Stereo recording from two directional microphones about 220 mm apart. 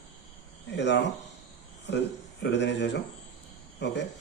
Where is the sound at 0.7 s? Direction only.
55° left (ahead or behind).